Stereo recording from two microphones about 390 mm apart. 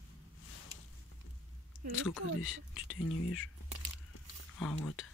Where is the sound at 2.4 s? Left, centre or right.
Left.